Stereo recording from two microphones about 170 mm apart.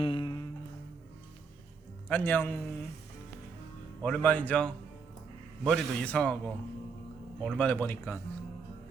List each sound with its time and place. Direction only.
0.0 s music: 30° left (ahead or behind)
2.0 s speech: 10° left (ahead or behind)
4.0 s speech: 10° left (ahead or behind)